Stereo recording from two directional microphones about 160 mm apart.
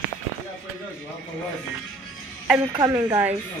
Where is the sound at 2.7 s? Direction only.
20° right (ahead or behind).